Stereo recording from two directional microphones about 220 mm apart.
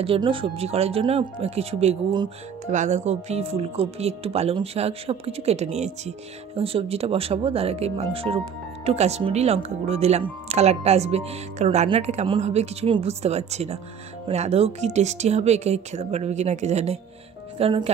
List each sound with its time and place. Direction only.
0.0 s speech: 25° right (ahead or behind)